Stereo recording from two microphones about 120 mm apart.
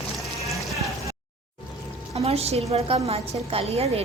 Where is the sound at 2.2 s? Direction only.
55° right (ahead or behind).